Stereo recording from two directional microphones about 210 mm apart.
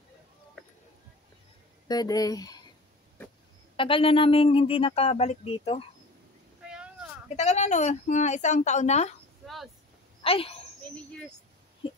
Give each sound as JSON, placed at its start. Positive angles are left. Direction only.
{"t": 1.9, "sound": "speech", "side_deg": 20}
{"t": 3.7, "sound": "speech", "side_deg": 25}
{"t": 6.6, "sound": "vehicle", "side_deg": -5}
{"t": 7.3, "sound": "a woman's voice", "side_deg": 35}
{"t": 10.2, "sound": "speech", "side_deg": 25}